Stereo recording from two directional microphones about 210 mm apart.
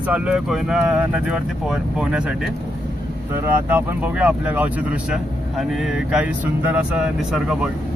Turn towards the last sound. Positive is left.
turn(degrees=0)  # may be behind; listen again after turning